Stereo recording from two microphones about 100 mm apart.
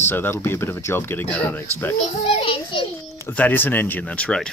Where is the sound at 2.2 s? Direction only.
65° left (ahead or behind).